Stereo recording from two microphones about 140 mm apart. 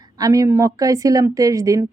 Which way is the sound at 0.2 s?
25° right (ahead or behind).